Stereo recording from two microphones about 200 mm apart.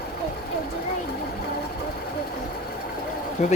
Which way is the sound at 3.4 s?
35° left (ahead or behind).